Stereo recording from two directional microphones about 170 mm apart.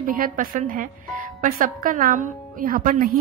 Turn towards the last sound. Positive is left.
turn(degrees=-60)  # may be behind; listen again after turning